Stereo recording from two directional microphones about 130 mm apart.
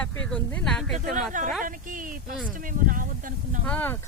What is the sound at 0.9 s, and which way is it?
Speech, 85° right.